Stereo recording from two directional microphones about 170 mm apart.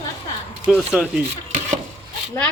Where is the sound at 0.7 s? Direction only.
5° right (ahead or behind).